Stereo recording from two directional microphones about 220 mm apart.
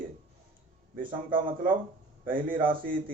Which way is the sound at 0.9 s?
40° right (ahead or behind).